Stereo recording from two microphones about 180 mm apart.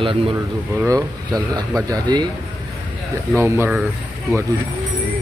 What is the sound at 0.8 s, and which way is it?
Speech, 20° right (ahead or behind).